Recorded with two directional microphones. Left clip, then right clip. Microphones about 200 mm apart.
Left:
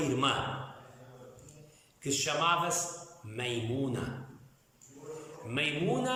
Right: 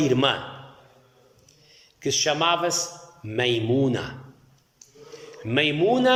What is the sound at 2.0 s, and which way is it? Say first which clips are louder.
A man's voice: right 8 dB; 40° right (ahead or behind).